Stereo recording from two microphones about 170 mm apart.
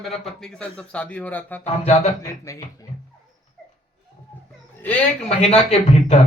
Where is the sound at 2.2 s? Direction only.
20° left (ahead or behind).